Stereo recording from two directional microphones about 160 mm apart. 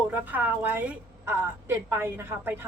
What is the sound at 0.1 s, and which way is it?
A woman's voice, 10° right (ahead or behind).